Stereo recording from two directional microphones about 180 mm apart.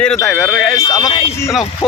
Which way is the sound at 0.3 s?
Centre (ahead or behind).